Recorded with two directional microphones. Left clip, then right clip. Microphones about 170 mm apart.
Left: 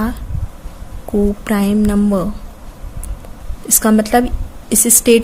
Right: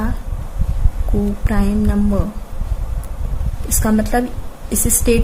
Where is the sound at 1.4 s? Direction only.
50° left (ahead or behind).